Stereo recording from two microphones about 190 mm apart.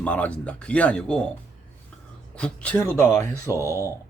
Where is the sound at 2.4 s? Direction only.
5° left (ahead or behind).